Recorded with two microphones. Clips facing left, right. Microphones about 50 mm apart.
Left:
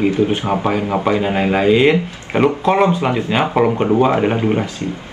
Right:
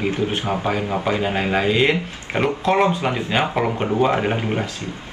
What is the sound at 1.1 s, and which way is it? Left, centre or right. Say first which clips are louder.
Speech: left 5 dB; centre.